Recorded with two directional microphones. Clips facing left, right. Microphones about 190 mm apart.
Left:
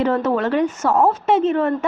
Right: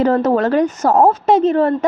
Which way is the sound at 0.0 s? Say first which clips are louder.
Right 4 dB; 40° right (ahead or behind).